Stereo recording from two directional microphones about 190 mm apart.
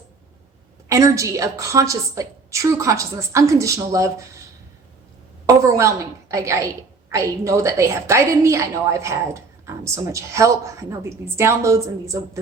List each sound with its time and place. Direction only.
0.9 s a woman's voice: 15° right (ahead or behind)
5.5 s a woman's voice: 15° right (ahead or behind)